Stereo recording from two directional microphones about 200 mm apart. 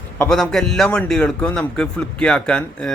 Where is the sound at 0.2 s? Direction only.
5° left (ahead or behind).